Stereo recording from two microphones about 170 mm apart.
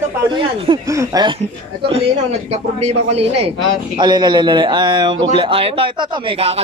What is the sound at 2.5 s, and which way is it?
Speech, 40° right (ahead or behind).